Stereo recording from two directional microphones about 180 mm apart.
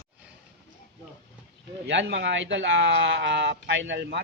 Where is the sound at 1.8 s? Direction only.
75° right (ahead or behind).